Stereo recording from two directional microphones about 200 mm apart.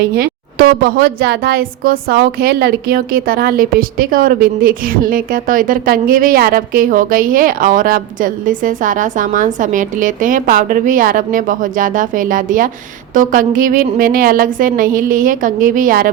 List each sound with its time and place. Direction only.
0.2 s speech: 50° right (ahead or behind)